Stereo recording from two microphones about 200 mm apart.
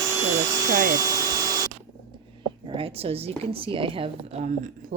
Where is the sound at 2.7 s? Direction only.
25° right (ahead or behind).